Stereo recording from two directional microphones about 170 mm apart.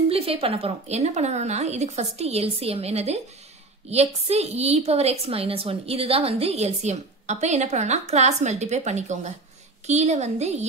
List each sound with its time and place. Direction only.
0.1 s a woman's voice: 35° right (ahead or behind)